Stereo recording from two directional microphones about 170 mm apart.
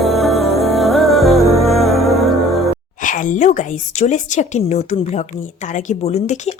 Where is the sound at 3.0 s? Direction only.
50° left (ahead or behind).